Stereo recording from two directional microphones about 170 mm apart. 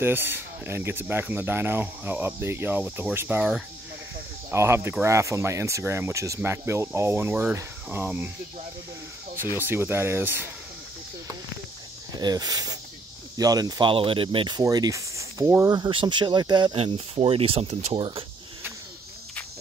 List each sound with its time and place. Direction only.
0.0 s speech: 15° right (ahead or behind)
9.6 s speech: 10° right (ahead or behind)
12.2 s speech: 25° right (ahead or behind)